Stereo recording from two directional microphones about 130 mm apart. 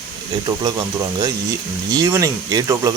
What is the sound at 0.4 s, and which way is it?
Speech, 30° right (ahead or behind).